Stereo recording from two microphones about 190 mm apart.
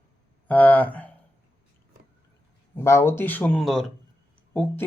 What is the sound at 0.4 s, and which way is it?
Speech, 10° left (ahead or behind).